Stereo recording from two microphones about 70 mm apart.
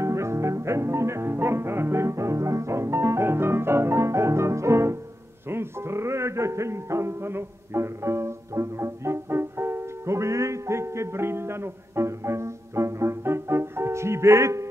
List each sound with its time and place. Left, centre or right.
0.0 s music: right